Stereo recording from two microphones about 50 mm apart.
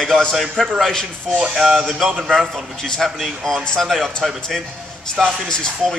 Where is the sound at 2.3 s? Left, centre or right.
Centre.